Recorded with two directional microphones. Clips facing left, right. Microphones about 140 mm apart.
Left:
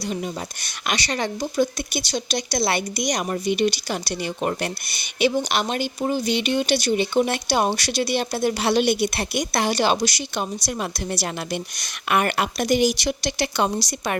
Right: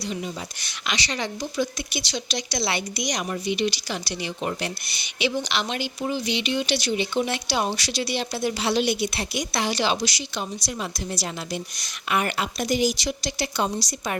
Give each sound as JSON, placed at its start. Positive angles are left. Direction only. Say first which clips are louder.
{"t": 0.6, "sound": "speech", "louder": "left 3 dB", "side_deg": 50}
{"t": 11.1, "sound": "a woman's voice", "louder": "left 3 dB", "side_deg": 65}